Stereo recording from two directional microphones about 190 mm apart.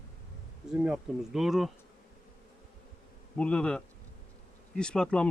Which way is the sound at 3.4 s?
5° left (ahead or behind).